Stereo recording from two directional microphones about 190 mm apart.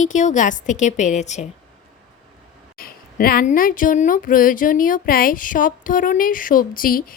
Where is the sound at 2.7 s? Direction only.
50° left (ahead or behind).